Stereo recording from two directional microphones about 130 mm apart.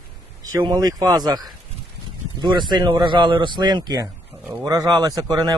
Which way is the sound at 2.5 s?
35° right (ahead or behind).